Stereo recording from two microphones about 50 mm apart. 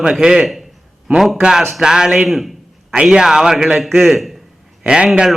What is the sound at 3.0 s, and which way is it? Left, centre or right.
A man's voice, centre.